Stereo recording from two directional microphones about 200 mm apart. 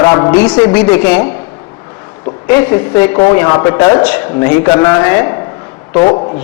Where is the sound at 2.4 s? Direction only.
10° left (ahead or behind).